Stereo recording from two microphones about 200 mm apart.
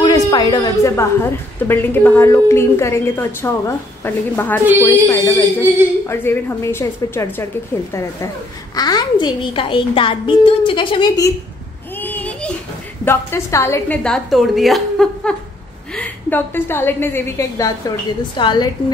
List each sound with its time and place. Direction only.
0.0 s a sound: 20° left (ahead or behind)
1.6 s a woman's voice: 10° left (ahead or behind)
8.7 s a child's voice: 20° left (ahead or behind)
12.0 s a sound: 10° left (ahead or behind)
13.0 s a woman's voice: 10° left (ahead or behind)
18.3 s a child's voice: 25° left (ahead or behind)